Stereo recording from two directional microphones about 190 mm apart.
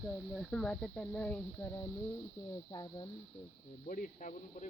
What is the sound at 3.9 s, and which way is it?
Speech, 40° left (ahead or behind).